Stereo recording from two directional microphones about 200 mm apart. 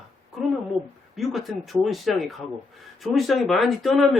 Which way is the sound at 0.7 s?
Centre (ahead or behind).